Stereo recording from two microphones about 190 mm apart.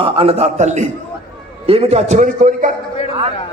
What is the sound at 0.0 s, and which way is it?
A man's voice, 30° right (ahead or behind).